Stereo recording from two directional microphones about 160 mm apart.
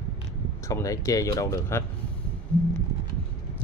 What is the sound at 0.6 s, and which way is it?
Speech, 20° left (ahead or behind).